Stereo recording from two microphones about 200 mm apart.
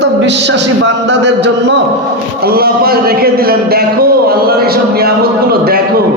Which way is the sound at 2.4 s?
50° right (ahead or behind).